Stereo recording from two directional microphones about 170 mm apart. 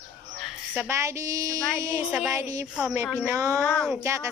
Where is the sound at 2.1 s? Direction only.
5° right (ahead or behind).